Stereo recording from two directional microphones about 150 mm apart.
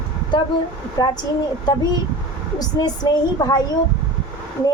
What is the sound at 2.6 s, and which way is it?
A woman's voice, 25° left (ahead or behind).